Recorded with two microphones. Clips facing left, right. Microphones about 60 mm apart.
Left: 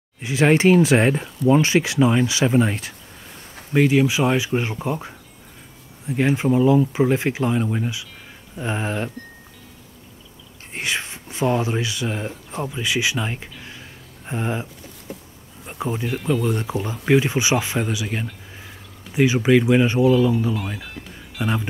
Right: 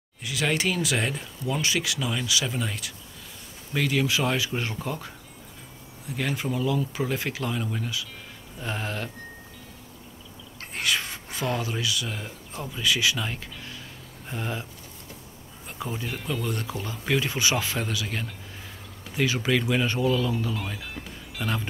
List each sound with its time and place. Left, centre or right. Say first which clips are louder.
0.2 s speech: left 10 dB; left
3.7 s speech: left 8 dB; left
10.7 s speech: left 2 dB; left
12.6 s a sound: left 2 dB; left
15.6 s insect: left 7 dB; centre
16.4 s speech: left 7 dB; centre
21.4 s speech: left 6 dB; centre